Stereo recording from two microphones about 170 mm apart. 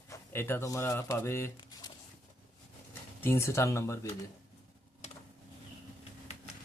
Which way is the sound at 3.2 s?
15° left (ahead or behind).